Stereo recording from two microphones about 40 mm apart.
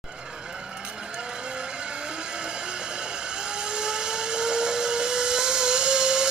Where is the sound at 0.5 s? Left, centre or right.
Right.